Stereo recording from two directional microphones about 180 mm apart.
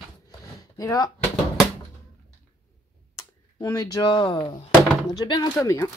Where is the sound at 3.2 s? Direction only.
20° left (ahead or behind).